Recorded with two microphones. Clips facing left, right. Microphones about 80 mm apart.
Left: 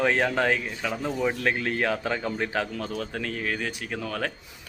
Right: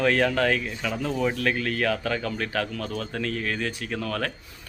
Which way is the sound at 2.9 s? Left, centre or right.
Centre.